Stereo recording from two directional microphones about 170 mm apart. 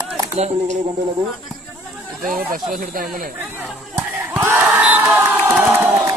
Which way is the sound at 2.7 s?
50° right (ahead or behind).